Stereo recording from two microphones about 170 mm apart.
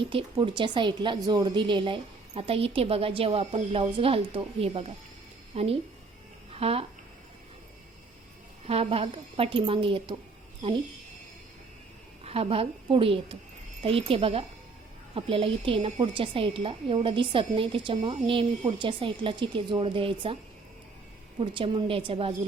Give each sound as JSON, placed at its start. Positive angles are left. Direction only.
{"t": 0.0, "sound": "a woman's voice", "side_deg": -30}
{"t": 8.6, "sound": "a woman's voice", "side_deg": -35}
{"t": 12.2, "sound": "a woman's voice", "side_deg": -35}
{"t": 21.3, "sound": "a woman's voice", "side_deg": -30}